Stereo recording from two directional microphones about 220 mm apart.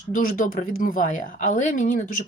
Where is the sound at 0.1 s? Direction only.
40° left (ahead or behind).